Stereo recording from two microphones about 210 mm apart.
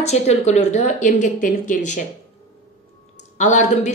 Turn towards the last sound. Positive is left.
turn(degrees=35)  # may be behind; listen again after turning